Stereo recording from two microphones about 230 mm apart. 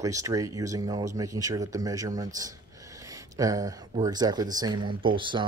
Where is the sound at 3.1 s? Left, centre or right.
Centre.